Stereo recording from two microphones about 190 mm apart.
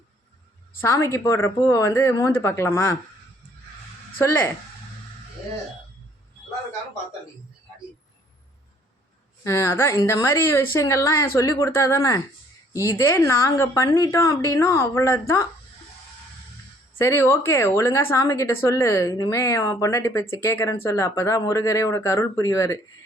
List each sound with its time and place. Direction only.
0.8 s a woman's voice: 15° left (ahead or behind)
9.4 s a woman's voice: 15° left (ahead or behind)
17.0 s a woman's voice: 15° left (ahead or behind)